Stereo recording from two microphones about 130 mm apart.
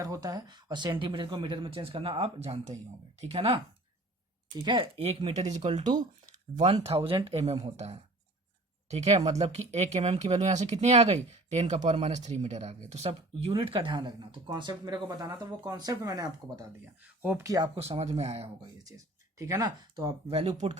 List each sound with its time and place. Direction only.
0.0 s speech: 25° right (ahead or behind); by 3.6 s 45° right (ahead or behind)
4.5 s speech: 35° right (ahead or behind); by 5.8 s 60° right (ahead or behind)
6.8 s speech: 50° right (ahead or behind); by 16.6 s 30° right (ahead or behind)
16.8 s speech: 15° right (ahead or behind)
17.4 s speech: 25° right (ahead or behind)
17.7 s speech: 50° right (ahead or behind)
18.6 s speech: 25° right (ahead or behind)
20.2 s speech: 50° right (ahead or behind)